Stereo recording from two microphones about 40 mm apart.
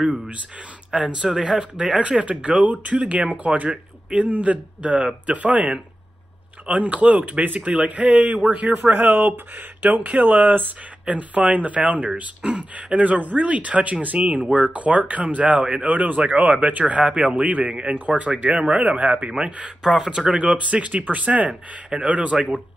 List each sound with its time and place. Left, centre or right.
1.0 s speech: right
6.7 s speech: right
11.1 s speech: right
17.9 s speech: right
19.3 s speech: right
19.8 s speech: centre; by 22.5 s right